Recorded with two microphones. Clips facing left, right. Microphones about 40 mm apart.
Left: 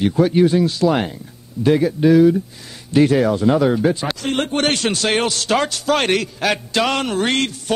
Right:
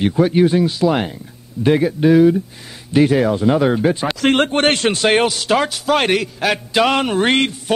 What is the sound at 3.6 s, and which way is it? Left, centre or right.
Speech, right.